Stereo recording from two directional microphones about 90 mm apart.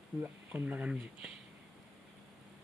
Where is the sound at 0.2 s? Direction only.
20° right (ahead or behind).